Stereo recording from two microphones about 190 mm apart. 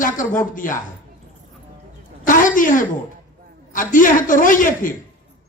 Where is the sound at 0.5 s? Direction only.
45° left (ahead or behind).